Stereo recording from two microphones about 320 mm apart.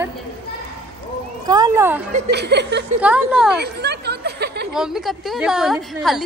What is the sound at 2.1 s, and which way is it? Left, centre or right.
Speech, right.